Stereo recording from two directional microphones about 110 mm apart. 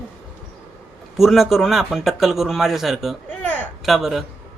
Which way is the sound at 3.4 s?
15° left (ahead or behind).